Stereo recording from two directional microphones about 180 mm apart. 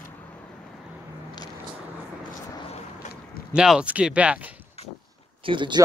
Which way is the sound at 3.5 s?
5° right (ahead or behind).